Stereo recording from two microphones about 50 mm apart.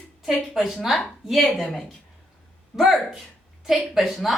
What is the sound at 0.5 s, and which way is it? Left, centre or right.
Speech, centre.